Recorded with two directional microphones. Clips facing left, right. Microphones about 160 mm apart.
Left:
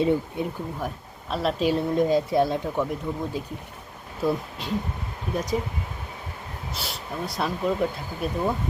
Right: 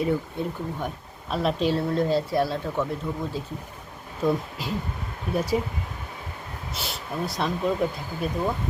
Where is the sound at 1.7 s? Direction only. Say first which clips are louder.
Left 2 dB; 15° left (ahead or behind).